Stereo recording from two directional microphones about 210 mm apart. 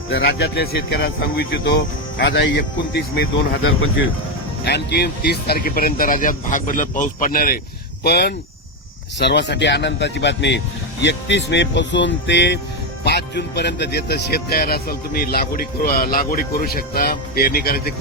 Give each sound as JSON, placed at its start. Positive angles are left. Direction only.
{"t": 0.1, "sound": "speech", "side_deg": 55}
{"t": 3.6, "sound": "speech", "side_deg": 75}
{"t": 4.6, "sound": "speech", "side_deg": 55}